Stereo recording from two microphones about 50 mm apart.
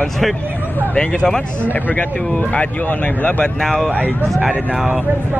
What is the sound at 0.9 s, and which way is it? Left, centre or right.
Speech, centre.